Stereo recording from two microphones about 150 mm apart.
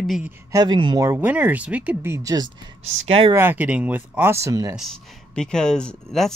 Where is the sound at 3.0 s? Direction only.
40° right (ahead or behind).